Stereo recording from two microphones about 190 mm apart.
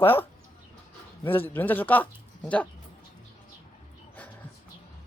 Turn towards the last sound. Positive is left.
turn(degrees=5)  # may be behind; listen again after turning